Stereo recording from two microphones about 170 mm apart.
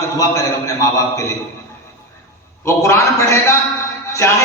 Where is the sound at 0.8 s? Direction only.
20° left (ahead or behind).